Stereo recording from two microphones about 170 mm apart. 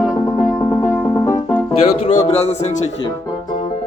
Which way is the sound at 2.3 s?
40° left (ahead or behind).